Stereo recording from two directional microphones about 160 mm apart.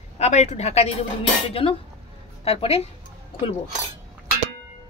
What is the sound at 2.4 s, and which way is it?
Speech, 40° left (ahead or behind).